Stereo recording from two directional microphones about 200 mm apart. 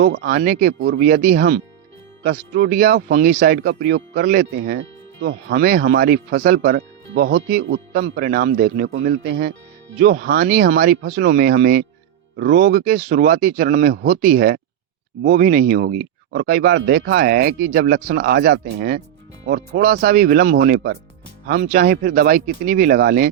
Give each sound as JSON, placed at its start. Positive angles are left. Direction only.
{"t": 0.0, "sound": "speech", "side_deg": -55}
{"t": 0.7, "sound": "speech", "side_deg": -60}
{"t": 0.9, "sound": "speech", "side_deg": -45}
{"t": 2.2, "sound": "speech", "side_deg": -55}